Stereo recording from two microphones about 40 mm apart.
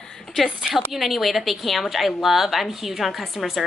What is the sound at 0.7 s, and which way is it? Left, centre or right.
A woman's voice, centre.